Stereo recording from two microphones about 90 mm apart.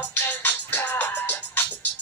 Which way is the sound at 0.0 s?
20° left (ahead or behind).